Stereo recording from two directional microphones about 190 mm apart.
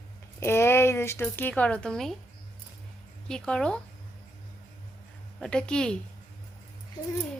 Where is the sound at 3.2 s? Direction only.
5° left (ahead or behind).